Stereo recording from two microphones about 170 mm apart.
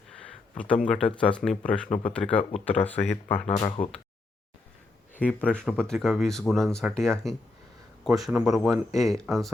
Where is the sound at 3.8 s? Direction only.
55° left (ahead or behind).